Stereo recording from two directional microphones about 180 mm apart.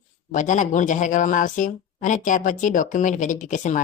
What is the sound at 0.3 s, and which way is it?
Speech, 45° left (ahead or behind).